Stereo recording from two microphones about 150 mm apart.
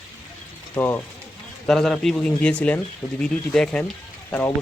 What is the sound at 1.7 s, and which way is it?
Speech, 5° left (ahead or behind).